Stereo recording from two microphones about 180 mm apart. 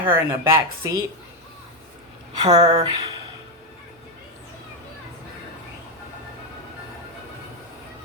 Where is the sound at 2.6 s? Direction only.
20° right (ahead or behind).